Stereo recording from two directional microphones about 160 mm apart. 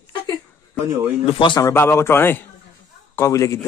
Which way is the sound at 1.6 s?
15° left (ahead or behind).